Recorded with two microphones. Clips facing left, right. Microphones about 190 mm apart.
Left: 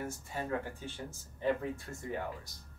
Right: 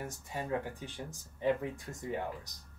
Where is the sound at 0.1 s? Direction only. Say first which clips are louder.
Right 1 dB; 15° right (ahead or behind).